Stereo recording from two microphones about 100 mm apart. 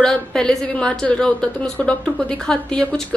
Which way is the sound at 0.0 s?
10° left (ahead or behind).